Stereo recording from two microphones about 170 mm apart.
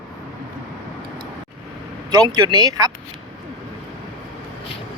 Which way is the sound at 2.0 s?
25° right (ahead or behind).